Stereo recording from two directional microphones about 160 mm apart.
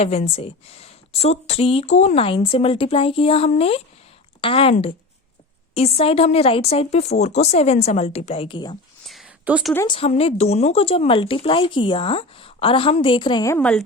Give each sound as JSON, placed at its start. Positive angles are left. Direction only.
{"t": 0.0, "sound": "speech", "side_deg": 40}
{"t": 9.0, "sound": "a sound", "side_deg": -5}
{"t": 9.8, "sound": "speech", "side_deg": 30}
{"t": 13.5, "sound": "a woman's voice", "side_deg": 5}